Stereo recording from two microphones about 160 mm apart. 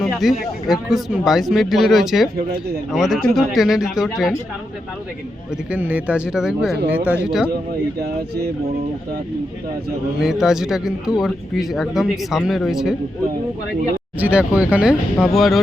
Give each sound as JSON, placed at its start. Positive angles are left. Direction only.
{"t": 0.0, "sound": "speech", "side_deg": 0}
{"t": 5.7, "sound": "speech", "side_deg": -10}
{"t": 8.0, "sound": "speech", "side_deg": -80}
{"t": 10.2, "sound": "speech", "side_deg": 0}
{"t": 14.2, "sound": "speech", "side_deg": -10}